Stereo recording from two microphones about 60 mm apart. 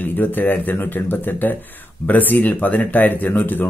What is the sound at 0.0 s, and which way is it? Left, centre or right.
Speech, left.